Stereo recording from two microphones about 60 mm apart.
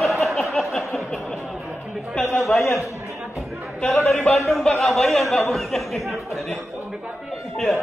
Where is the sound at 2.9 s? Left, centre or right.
Right.